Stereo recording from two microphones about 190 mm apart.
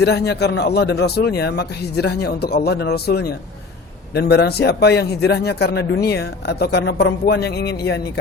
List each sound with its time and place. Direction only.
0.0 s a man's voice: 60° left (ahead or behind)